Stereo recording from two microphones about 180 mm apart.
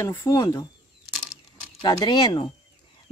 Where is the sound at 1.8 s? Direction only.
25° left (ahead or behind).